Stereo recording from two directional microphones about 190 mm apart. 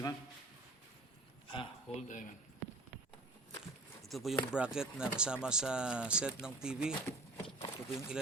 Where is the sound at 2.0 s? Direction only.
40° left (ahead or behind).